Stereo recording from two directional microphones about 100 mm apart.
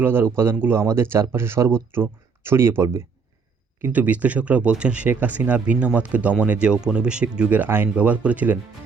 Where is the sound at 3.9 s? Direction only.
15° right (ahead or behind).